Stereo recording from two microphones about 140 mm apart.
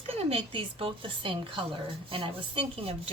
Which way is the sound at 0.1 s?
45° right (ahead or behind).